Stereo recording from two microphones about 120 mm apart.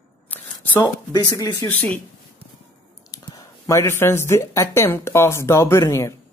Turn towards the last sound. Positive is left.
turn(degrees=25)  # may be behind; listen again after turning